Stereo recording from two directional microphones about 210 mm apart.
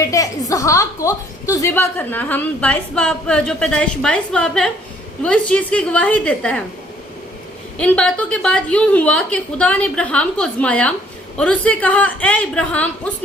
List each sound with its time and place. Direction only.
0.0 s a woman's voice: 15° left (ahead or behind)
7.8 s a woman's voice: 5° left (ahead or behind)